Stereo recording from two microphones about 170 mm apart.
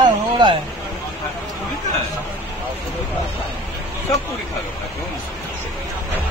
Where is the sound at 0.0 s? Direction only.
25° right (ahead or behind).